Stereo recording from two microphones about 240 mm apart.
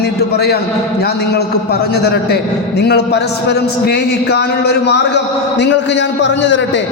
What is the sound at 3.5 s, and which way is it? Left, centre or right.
A man's voice, left.